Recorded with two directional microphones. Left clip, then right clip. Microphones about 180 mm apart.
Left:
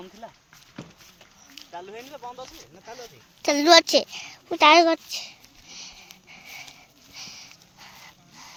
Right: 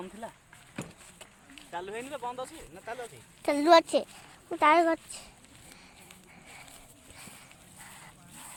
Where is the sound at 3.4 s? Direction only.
25° left (ahead or behind).